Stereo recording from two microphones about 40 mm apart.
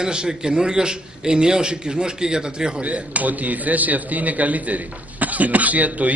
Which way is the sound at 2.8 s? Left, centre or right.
Right.